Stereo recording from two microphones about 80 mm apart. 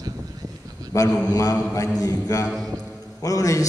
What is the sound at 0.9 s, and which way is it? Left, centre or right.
A man's voice, left.